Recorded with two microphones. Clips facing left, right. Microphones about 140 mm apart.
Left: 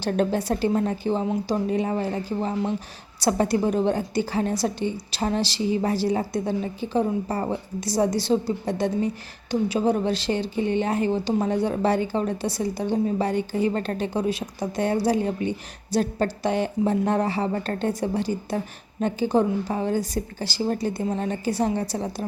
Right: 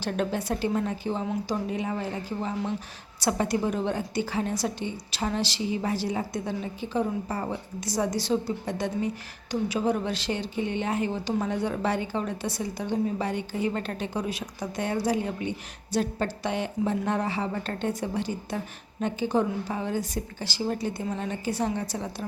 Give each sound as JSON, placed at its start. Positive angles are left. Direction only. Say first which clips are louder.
{"t": 0.0, "sound": "a woman's voice", "louder": "left 5 dB", "side_deg": 35}